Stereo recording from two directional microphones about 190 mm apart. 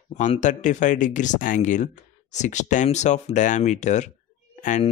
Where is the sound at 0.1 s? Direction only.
40° left (ahead or behind).